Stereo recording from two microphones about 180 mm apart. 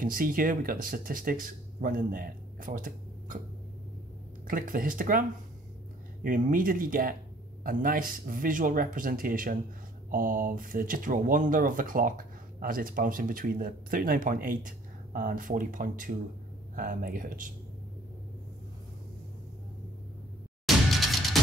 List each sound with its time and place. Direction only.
0.0 s speech: 50° right (ahead or behind)
4.5 s speech: 50° right (ahead or behind)
6.2 s speech: 50° right (ahead or behind)
20.6 s music: centre (ahead or behind)